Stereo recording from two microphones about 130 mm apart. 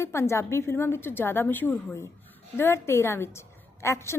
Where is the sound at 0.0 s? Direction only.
20° left (ahead or behind).